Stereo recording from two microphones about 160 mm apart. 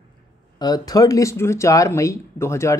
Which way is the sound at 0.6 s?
25° left (ahead or behind).